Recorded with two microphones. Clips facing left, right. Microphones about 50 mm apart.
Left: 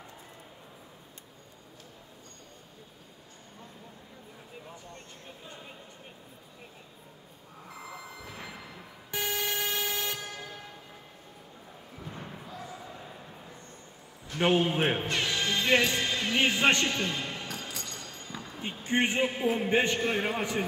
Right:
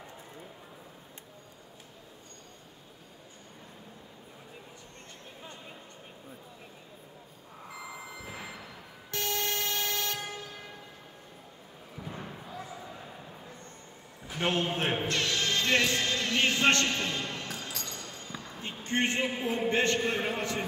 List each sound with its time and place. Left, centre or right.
8.1 s a sound: centre
9.1 s vehicle: centre
12.2 s a sound: centre
14.4 s speech: centre
17.0 s a sound: centre
17.5 s music: centre
18.9 s speech: centre
19.2 s a man's voice: centre
19.7 s speech: centre